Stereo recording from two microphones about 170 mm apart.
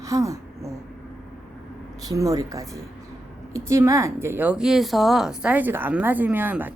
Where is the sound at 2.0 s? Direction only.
20° right (ahead or behind).